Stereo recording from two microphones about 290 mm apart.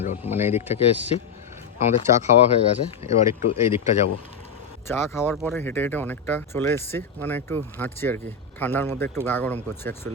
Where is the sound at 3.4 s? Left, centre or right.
Left.